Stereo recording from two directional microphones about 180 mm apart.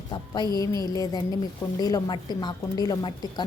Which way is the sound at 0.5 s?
20° left (ahead or behind).